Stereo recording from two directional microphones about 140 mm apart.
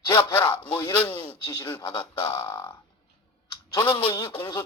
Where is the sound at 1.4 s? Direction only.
25° left (ahead or behind).